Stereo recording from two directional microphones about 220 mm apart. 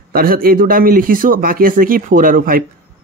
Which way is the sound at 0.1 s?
40° right (ahead or behind).